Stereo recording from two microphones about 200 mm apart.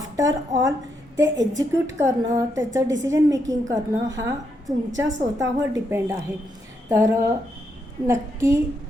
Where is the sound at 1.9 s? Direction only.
15° right (ahead or behind).